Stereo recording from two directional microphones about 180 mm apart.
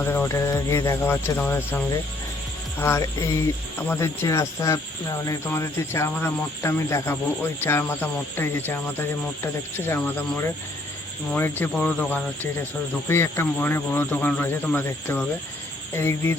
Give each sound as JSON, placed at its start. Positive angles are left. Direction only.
{"t": 0.0, "sound": "speech", "side_deg": 10}